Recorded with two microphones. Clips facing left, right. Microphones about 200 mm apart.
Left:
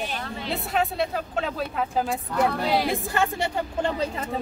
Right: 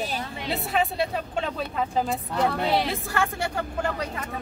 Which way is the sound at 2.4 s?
15° left (ahead or behind).